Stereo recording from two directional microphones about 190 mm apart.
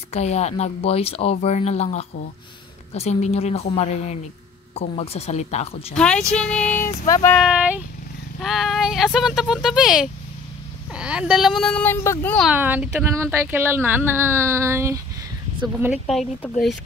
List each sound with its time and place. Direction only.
0.1 s speech: 35° left (ahead or behind)
5.9 s speech: 5° left (ahead or behind)
6.3 s music: 5° left (ahead or behind)
7.3 s speech: 5° right (ahead or behind)
12.4 s speech: 10° right (ahead or behind)
15.8 s speech: centre (ahead or behind)